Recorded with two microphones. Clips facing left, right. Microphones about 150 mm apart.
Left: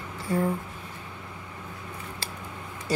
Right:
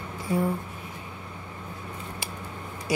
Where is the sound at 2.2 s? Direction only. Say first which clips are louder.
Right 1 dB; 15° right (ahead or behind).